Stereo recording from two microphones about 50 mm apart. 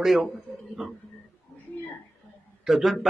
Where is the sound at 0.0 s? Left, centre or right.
Centre.